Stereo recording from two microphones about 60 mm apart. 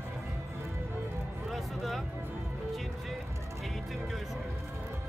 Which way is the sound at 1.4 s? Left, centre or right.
Centre.